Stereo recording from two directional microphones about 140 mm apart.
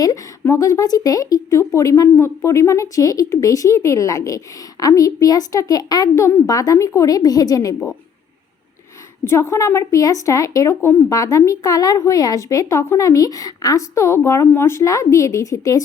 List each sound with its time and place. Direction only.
0.0 s a woman's voice: 25° left (ahead or behind)
9.2 s a woman's voice: 20° left (ahead or behind)